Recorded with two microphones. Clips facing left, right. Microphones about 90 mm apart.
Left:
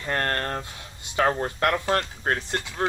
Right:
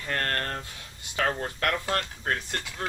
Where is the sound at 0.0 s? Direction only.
30° left (ahead or behind).